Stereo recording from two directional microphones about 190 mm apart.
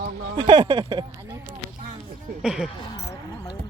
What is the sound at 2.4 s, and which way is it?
Speech, 5° right (ahead or behind).